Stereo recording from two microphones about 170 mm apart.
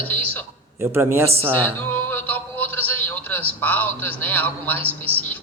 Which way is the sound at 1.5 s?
10° left (ahead or behind).